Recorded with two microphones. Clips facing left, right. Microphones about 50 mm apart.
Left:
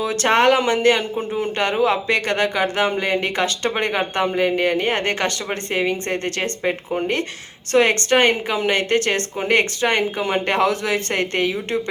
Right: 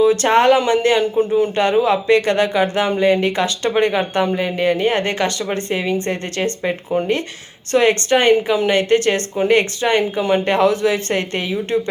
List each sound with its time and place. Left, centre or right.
0.0 s speech: left
7.7 s speech: left